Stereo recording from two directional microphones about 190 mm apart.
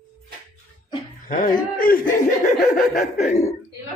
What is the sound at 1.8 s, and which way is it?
Speech, 45° left (ahead or behind).